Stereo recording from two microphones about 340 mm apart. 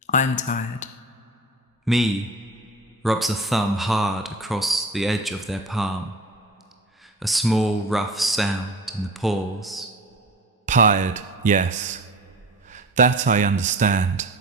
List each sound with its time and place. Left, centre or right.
0.1 s speech: left
1.8 s a man's voice: centre
7.2 s speech: centre
10.7 s speech: right